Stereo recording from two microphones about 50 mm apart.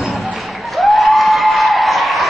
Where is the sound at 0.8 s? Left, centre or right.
Centre.